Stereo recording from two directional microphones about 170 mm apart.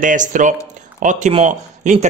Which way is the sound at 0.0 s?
50° right (ahead or behind).